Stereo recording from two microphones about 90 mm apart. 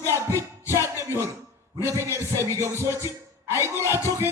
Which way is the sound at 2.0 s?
30° right (ahead or behind).